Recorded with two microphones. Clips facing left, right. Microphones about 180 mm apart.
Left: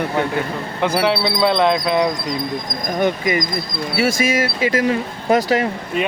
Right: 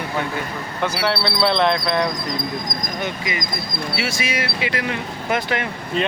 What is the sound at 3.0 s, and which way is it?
Speech, 50° left (ahead or behind).